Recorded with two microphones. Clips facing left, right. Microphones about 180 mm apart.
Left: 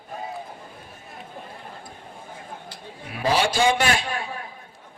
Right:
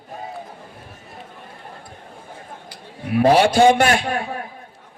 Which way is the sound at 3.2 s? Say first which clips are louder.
Right 8 dB; 60° right (ahead or behind).